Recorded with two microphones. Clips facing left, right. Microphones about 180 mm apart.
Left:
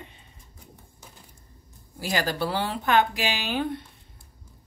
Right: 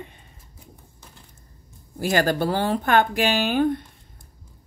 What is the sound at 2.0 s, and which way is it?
Speech, 50° right (ahead or behind).